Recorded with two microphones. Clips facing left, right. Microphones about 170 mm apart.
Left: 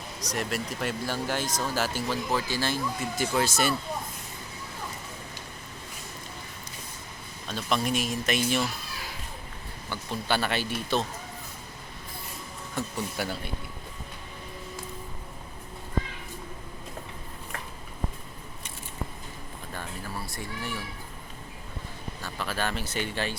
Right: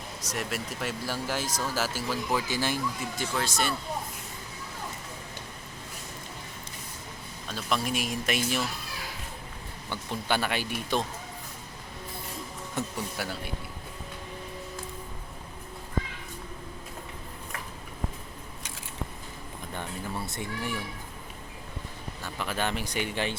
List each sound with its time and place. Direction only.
0.2 s speech: 5° right (ahead or behind)
3.2 s speech: 5° left (ahead or behind)
7.5 s speech: 5° right (ahead or behind)
9.9 s speech: 15° right (ahead or behind)
12.8 s speech: 20° right (ahead or behind)
13.2 s speech: 5° right (ahead or behind)
19.7 s cat: 20° right (ahead or behind)
22.2 s speech: 15° right (ahead or behind)